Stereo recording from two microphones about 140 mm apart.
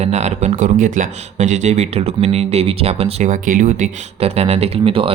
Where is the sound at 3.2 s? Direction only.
70° right (ahead or behind).